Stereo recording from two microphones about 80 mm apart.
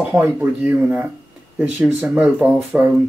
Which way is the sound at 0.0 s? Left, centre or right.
Right.